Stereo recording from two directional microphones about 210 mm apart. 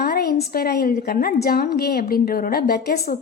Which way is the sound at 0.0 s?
50° left (ahead or behind).